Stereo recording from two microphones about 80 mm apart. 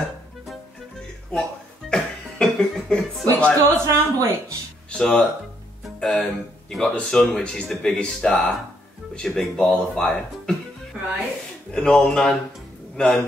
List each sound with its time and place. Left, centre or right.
1.3 s a sound: centre
3.3 s speech: centre
3.8 s a woman's voice: right
4.9 s speech: centre
11.7 s speech: centre